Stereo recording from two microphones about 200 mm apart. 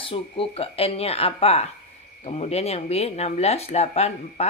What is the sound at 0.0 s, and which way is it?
Speech, 25° left (ahead or behind).